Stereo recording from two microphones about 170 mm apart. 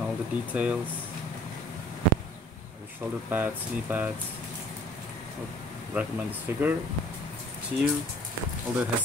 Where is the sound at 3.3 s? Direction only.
10° right (ahead or behind).